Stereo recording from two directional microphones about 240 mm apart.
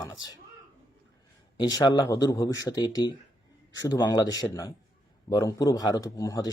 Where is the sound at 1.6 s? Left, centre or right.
Centre.